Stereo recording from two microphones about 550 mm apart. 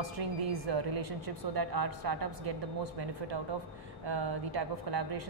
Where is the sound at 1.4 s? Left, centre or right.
Right.